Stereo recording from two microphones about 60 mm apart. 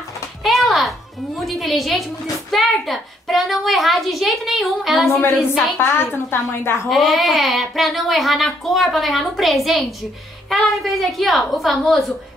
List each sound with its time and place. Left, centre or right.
0.4 s a woman's voice: centre
5.8 s a woman's voice: left
6.9 s speech: centre